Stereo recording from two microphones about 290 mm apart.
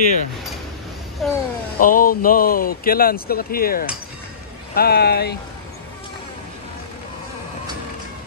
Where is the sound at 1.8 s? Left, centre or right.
Left.